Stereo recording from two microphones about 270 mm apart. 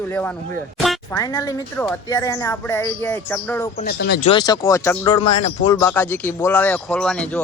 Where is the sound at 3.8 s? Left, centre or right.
Left.